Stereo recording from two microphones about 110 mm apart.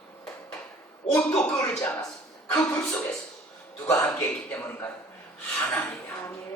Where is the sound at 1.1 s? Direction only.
5° left (ahead or behind).